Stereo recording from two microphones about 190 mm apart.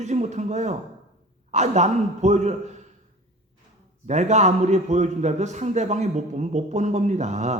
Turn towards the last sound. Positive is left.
turn(degrees=-35)  # may be behind; listen again after turning